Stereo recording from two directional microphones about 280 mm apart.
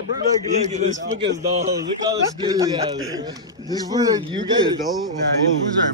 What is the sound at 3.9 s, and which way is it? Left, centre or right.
Speech, centre.